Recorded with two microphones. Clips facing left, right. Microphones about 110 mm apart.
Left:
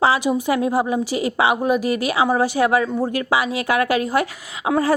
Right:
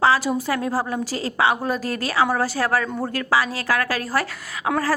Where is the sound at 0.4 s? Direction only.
20° left (ahead or behind).